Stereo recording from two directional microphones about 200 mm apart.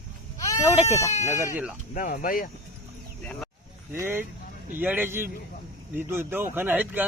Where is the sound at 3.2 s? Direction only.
5° left (ahead or behind).